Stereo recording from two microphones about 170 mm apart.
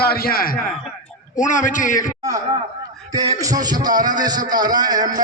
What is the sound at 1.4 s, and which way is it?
Speech, 50° left (ahead or behind).